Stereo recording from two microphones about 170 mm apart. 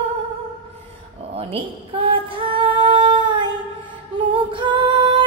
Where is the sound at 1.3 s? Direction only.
35° right (ahead or behind).